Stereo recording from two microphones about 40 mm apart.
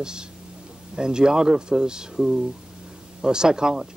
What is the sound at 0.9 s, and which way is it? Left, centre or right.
Speech, centre.